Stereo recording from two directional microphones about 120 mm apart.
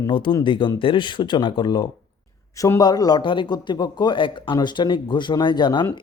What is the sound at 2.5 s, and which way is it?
A man's voice, 25° left (ahead or behind).